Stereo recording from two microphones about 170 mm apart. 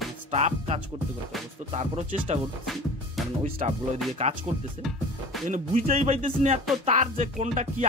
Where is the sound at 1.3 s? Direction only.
Centre (ahead or behind).